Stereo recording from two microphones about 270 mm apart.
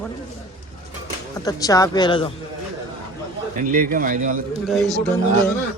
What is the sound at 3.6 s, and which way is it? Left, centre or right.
A man's voice, right.